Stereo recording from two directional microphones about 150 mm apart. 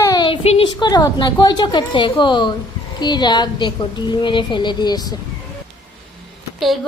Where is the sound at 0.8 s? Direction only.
25° left (ahead or behind).